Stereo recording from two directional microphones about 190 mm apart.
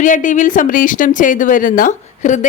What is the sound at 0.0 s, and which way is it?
A woman's voice, 40° left (ahead or behind).